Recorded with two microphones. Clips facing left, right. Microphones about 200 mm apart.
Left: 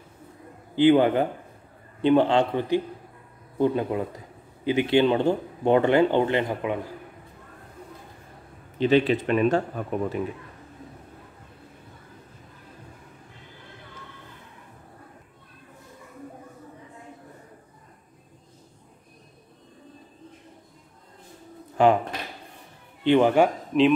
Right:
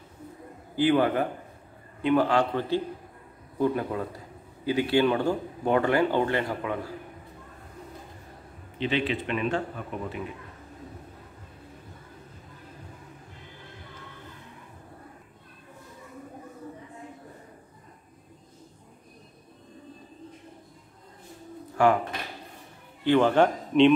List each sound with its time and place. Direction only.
0.7 s speech: 20° left (ahead or behind)
8.7 s speech: 40° left (ahead or behind)
21.8 s speech: 20° left (ahead or behind)
23.0 s a man's voice: 15° left (ahead or behind)